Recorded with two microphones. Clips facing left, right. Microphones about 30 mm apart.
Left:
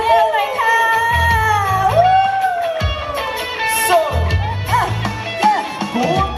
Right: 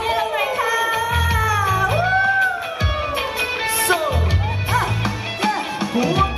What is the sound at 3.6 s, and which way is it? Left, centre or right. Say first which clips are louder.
Music: left 4 dB; centre.